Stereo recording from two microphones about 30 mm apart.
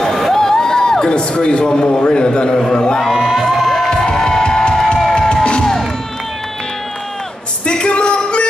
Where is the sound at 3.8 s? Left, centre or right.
Left.